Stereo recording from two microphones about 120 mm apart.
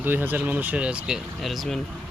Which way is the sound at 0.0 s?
15° right (ahead or behind).